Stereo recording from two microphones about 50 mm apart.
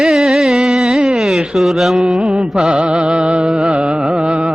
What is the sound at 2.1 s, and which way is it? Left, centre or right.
Mantra, centre.